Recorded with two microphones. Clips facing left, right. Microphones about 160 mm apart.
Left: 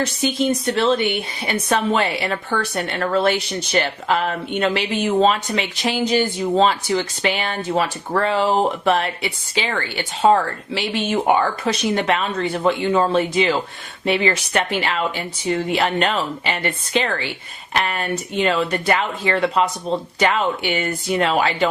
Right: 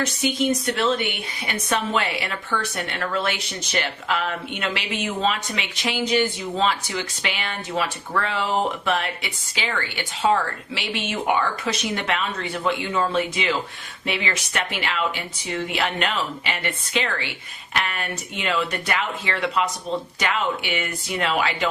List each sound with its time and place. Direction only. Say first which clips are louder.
0.0 s speech: left 3 dB; 30° left (ahead or behind)